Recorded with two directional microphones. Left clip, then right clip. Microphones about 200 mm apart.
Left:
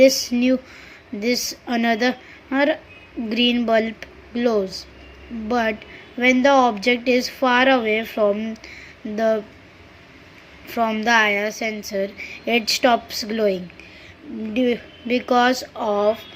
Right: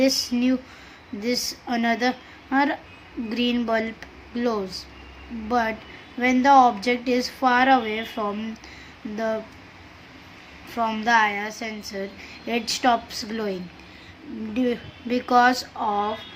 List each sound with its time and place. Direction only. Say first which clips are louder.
0.0 s a woman's voice: left 7 dB; 15° left (ahead or behind)
10.8 s a woman's voice: left 3 dB; 15° left (ahead or behind)